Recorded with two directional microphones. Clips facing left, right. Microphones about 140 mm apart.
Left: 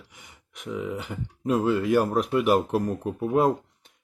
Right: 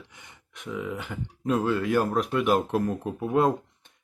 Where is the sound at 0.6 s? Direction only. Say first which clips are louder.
Left 2 dB; 25° left (ahead or behind).